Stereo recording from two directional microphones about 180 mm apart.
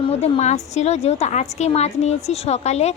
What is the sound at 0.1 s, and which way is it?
A woman's voice, 35° left (ahead or behind).